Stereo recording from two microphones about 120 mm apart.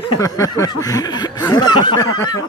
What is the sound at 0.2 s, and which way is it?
A man's voice, 30° left (ahead or behind).